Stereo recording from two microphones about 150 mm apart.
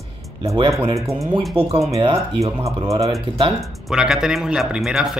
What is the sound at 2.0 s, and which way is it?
Speech, 35° right (ahead or behind).